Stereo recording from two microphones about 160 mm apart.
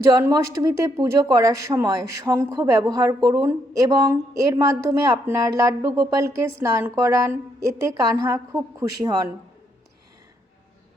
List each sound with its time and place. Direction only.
0.0 s speech: 20° right (ahead or behind)